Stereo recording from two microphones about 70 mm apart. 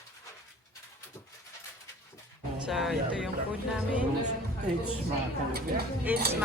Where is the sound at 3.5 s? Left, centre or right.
Centre.